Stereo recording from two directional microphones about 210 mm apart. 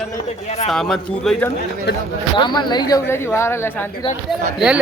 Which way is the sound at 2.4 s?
20° left (ahead or behind).